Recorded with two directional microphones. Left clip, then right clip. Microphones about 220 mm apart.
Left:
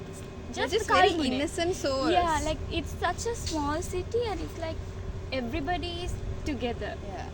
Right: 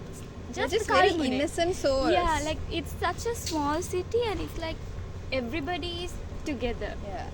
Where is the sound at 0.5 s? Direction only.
10° right (ahead or behind).